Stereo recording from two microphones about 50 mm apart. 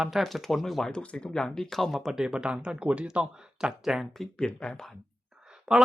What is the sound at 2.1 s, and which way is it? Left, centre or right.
Speech, centre.